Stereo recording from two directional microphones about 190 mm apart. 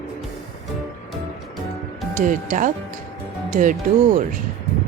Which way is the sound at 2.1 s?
45° right (ahead or behind).